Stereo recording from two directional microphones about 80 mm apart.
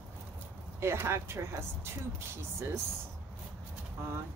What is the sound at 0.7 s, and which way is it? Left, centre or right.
Speech, right.